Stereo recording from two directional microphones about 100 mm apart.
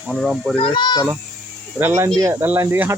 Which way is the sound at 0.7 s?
45° left (ahead or behind).